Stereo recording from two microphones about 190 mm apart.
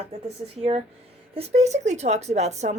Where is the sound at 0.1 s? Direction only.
35° right (ahead or behind).